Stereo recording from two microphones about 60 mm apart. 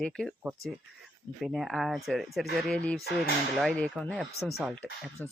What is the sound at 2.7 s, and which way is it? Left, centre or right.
Speech, centre.